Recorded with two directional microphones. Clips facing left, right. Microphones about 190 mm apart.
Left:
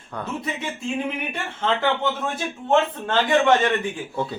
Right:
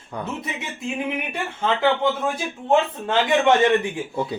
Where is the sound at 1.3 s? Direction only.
10° right (ahead or behind).